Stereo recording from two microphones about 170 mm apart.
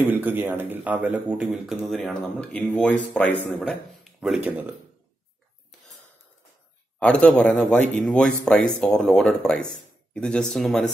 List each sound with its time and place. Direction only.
0.0 s a man's voice: 10° right (ahead or behind); by 3.7 s 10° left (ahead or behind)
4.2 s a man's voice: 5° right (ahead or behind)
7.0 s speech: 5° left (ahead or behind)